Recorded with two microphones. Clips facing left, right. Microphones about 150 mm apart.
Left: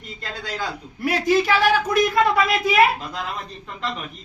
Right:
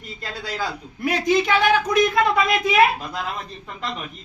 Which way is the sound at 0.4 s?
10° right (ahead or behind).